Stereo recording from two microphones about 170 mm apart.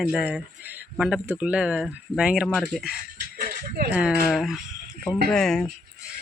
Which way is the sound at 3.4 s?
50° right (ahead or behind).